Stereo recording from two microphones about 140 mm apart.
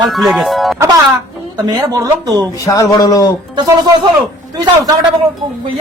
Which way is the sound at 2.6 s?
25° left (ahead or behind).